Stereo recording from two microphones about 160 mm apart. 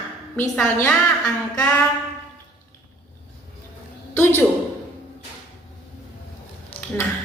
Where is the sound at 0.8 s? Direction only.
5° left (ahead or behind).